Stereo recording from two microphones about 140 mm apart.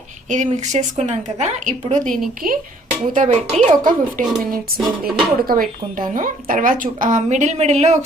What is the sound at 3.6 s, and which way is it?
Speech, 70° right (ahead or behind).